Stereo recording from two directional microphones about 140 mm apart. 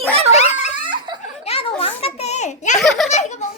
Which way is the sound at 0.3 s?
50° left (ahead or behind).